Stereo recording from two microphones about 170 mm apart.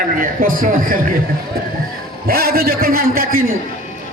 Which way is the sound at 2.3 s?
65° right (ahead or behind).